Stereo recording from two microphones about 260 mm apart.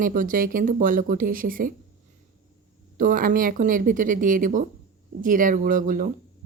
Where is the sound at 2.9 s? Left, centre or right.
Right.